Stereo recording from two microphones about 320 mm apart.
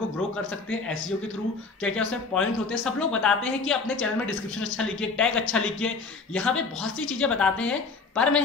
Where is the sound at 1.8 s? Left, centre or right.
Centre.